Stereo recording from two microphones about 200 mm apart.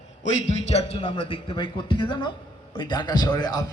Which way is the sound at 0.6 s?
30° left (ahead or behind).